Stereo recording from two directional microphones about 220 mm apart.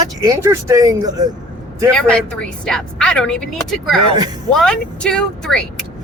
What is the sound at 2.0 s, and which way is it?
Speech, 5° left (ahead or behind).